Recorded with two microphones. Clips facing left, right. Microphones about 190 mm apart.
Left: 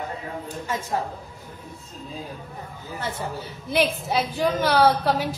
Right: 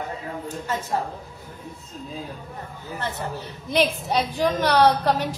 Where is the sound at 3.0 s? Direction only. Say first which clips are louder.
Even; 10° left (ahead or behind).